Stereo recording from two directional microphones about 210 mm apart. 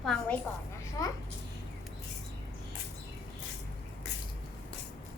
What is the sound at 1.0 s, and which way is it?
Speech, 15° left (ahead or behind).